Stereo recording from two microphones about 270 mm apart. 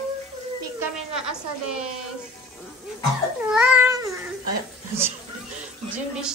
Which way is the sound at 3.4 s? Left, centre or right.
Centre.